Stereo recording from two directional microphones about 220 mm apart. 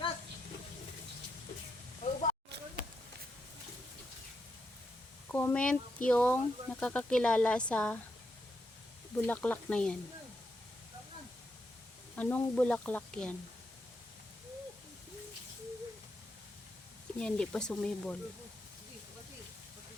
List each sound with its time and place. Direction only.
2.0 s snake: 35° left (ahead or behind)
5.3 s speech: 10° left (ahead or behind)
9.1 s speech: 5° left (ahead or behind)
12.1 s speech: 10° left (ahead or behind)
17.2 s speech: 5° left (ahead or behind)